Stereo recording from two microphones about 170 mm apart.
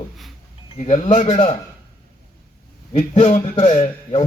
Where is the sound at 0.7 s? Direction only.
45° left (ahead or behind).